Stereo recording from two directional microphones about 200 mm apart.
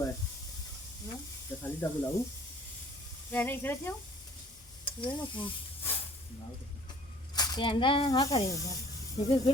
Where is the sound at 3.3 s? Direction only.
10° left (ahead or behind).